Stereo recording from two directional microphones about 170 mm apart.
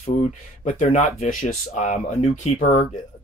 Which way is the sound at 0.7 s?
45° left (ahead or behind).